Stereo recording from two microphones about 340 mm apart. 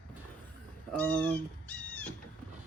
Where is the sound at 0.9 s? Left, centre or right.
Centre.